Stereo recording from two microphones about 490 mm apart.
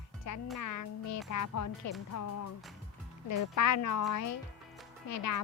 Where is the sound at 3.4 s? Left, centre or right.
Left.